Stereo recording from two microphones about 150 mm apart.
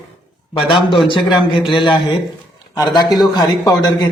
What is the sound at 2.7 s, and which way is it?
Speech, 25° left (ahead or behind).